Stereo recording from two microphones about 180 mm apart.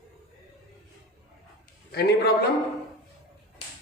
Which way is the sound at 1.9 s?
60° left (ahead or behind).